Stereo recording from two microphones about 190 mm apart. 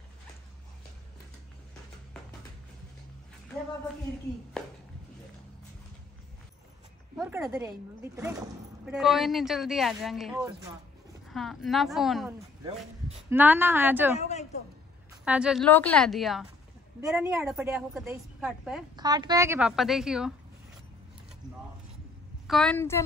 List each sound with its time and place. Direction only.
7.2 s speech: 5° right (ahead or behind)
8.8 s speech: 5° right (ahead or behind)
10.3 s speech: 15° right (ahead or behind)
11.2 s speech: centre (ahead or behind)
13.3 s speech: 10° right (ahead or behind)
14.1 s a woman's voice: 35° left (ahead or behind)
15.2 s speech: 5° right (ahead or behind)
15.6 s speech: 5° left (ahead or behind)
18.9 s a woman's voice: 20° right (ahead or behind)
19.7 s speech: centre (ahead or behind)
22.5 s a woman's voice: 5° left (ahead or behind)